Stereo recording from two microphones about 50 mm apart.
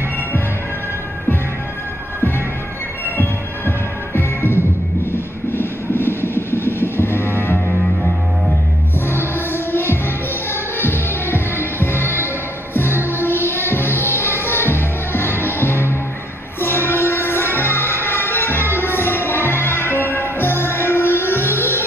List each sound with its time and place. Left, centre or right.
3.2 s music: left
9.0 s music: left